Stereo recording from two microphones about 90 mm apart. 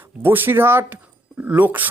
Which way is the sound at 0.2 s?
25° right (ahead or behind).